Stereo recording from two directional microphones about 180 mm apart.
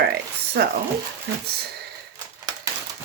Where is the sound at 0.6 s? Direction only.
60° right (ahead or behind).